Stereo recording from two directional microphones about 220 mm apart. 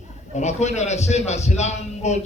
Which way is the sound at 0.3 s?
30° left (ahead or behind).